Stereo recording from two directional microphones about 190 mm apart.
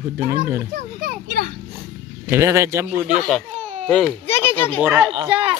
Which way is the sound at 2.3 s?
15° right (ahead or behind).